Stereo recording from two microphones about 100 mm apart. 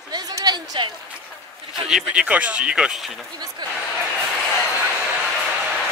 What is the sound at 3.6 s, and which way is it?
Speech, 45° right (ahead or behind).